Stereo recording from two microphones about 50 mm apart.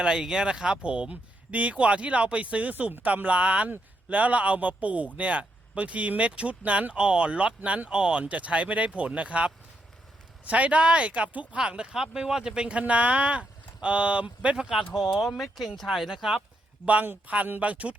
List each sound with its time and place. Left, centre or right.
0.0 s speech: centre
14.5 s speech: centre
14.9 s speech: centre
16.8 s speech: right